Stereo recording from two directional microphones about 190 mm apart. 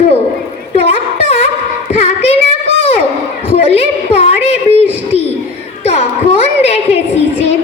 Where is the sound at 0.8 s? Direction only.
30° left (ahead or behind).